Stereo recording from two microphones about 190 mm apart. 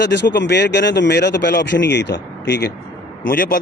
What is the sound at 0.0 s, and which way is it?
Speech, 65° left (ahead or behind).